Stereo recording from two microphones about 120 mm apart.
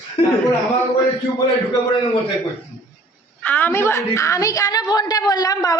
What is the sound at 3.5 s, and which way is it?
A woman's voice, 20° left (ahead or behind).